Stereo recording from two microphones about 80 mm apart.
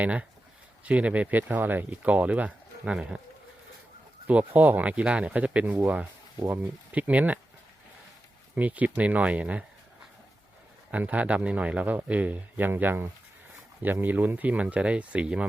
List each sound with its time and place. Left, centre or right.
0.0 s speech: centre
4.3 s speech: centre
8.5 s speech: centre
10.9 s speech: centre